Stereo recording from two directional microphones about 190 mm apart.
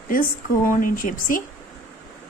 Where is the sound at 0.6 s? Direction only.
45° left (ahead or behind).